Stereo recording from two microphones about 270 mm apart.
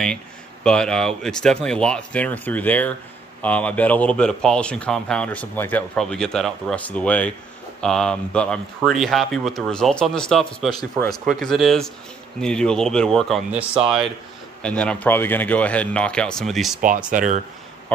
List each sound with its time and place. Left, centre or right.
0.7 s speech: centre
17.1 s speech: right